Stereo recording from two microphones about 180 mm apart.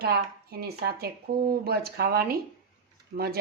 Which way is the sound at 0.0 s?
60° right (ahead or behind).